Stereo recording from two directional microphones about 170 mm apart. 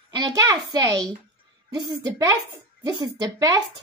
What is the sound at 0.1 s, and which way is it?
A child's voice, 20° right (ahead or behind).